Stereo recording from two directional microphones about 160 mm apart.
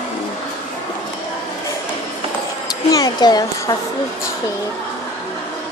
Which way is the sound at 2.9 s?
25° left (ahead or behind).